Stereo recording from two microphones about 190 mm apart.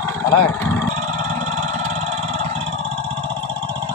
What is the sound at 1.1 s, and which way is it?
Vehicle, 40° right (ahead or behind).